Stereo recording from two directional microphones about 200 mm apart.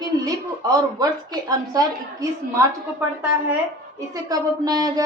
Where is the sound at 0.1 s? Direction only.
20° right (ahead or behind).